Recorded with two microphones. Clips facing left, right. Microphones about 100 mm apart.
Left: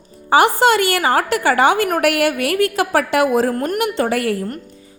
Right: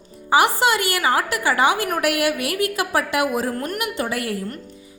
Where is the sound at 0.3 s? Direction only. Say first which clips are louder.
Left 4 dB; 55° left (ahead or behind).